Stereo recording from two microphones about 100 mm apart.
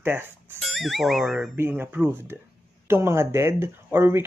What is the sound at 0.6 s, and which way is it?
Speech, centre (ahead or behind).